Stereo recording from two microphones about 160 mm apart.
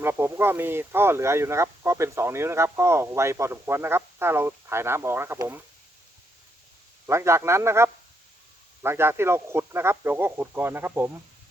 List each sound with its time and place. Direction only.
0.0 s speech: 15° right (ahead or behind)
7.1 s speech: 15° right (ahead or behind)